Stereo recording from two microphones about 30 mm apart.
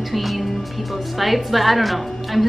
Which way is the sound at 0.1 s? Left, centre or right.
Centre.